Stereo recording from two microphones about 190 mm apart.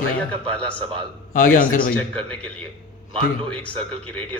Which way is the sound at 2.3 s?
5° left (ahead or behind).